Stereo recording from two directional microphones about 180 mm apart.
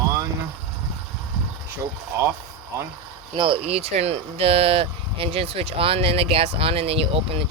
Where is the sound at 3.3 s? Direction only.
25° right (ahead or behind).